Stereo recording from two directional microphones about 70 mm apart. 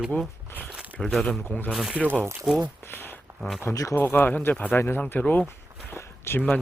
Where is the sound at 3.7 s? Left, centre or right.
Left.